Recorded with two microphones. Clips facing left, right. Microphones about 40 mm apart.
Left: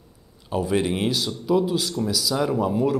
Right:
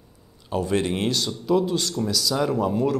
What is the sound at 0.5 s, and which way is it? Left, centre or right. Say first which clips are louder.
Speech: left 1 dB; centre.